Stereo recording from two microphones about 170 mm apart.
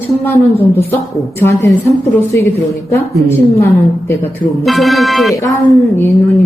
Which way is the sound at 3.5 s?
15° left (ahead or behind).